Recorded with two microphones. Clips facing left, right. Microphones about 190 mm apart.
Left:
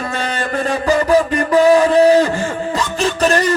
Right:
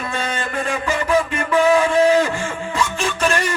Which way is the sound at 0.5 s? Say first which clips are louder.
Left 8 dB; 35° left (ahead or behind).